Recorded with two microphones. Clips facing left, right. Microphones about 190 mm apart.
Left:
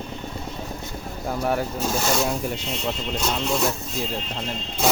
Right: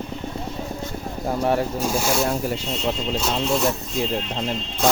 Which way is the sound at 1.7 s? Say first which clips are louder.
Right 1 dB; 10° right (ahead or behind).